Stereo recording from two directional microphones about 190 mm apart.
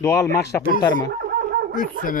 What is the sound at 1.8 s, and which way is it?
Speech, 45° left (ahead or behind).